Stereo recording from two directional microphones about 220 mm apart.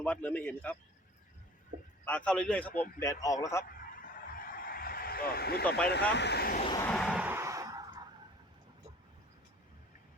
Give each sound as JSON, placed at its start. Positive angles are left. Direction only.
{"t": 0.0, "sound": "a man's voice", "side_deg": 5}
{"t": 2.0, "sound": "a man's voice", "side_deg": 5}
{"t": 4.1, "sound": "a sound", "side_deg": 40}
{"t": 5.6, "sound": "a man's voice", "side_deg": 5}
{"t": 6.1, "sound": "speech", "side_deg": 50}
{"t": 6.8, "sound": "a sound", "side_deg": 0}